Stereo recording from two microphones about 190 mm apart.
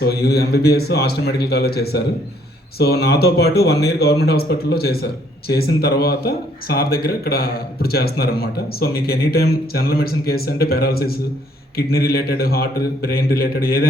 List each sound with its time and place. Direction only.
0.0 s a man's voice: 55° left (ahead or behind)